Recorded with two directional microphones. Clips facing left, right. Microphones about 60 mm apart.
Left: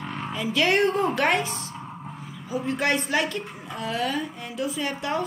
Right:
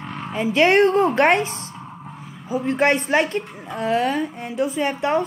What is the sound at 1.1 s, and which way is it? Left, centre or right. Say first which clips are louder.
Speech: right 6 dB; right.